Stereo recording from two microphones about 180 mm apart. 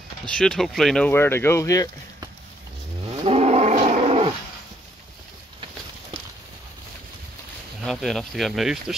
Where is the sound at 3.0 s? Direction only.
30° right (ahead or behind).